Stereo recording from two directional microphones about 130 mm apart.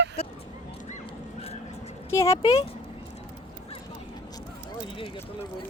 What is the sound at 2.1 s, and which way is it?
Speech, 25° left (ahead or behind).